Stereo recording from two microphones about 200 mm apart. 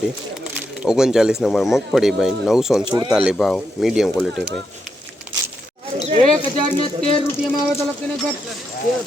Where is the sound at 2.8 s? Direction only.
20° right (ahead or behind).